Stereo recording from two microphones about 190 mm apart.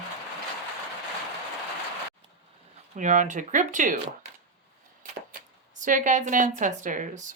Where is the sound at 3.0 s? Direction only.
40° right (ahead or behind).